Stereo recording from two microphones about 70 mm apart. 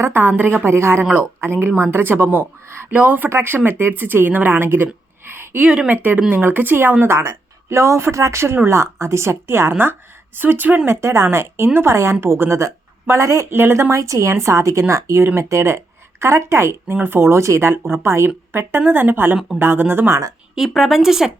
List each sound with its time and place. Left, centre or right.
0.0 s a woman's voice: right
2.9 s speech: right
3.2 s a woman's voice: right
5.3 s a sound: right
5.6 s speech: centre
5.9 s a woman's voice: right
10.8 s a woman's voice: right
13.5 s a woman's voice: right
13.9 s a woman's voice: right
20.6 s speech: centre